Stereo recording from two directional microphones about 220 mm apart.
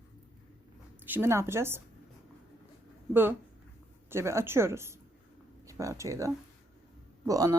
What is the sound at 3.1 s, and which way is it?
A woman's voice, 10° right (ahead or behind).